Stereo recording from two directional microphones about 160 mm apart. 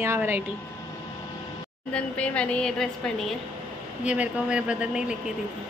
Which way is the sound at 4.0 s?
5° right (ahead or behind).